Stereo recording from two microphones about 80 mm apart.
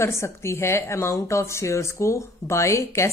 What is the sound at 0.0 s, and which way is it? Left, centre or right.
A woman's voice, left.